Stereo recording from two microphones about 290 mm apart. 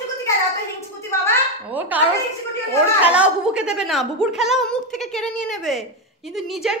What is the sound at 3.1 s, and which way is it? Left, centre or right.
A woman's voice, centre.